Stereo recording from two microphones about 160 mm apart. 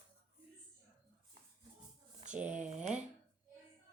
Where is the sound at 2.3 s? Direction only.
5° right (ahead or behind).